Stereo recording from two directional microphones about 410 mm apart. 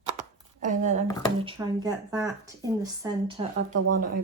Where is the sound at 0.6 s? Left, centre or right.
Centre.